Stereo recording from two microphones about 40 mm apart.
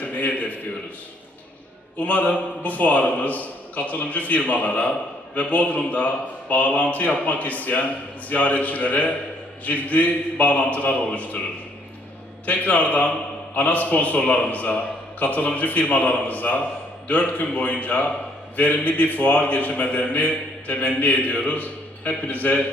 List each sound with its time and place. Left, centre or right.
0.0 s a sound: left
2.0 s a man's voice: left
12.5 s a man's voice: left